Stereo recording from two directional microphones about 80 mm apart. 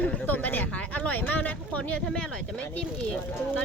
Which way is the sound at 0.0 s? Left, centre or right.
Left.